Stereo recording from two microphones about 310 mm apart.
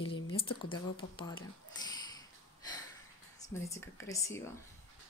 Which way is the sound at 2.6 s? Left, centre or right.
Centre.